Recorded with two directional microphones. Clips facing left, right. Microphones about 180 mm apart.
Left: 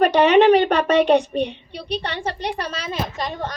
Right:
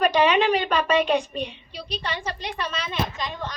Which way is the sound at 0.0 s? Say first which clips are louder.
Left 6 dB; 65° left (ahead or behind).